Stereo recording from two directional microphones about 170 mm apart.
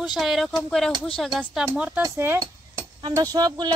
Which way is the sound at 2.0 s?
15° right (ahead or behind).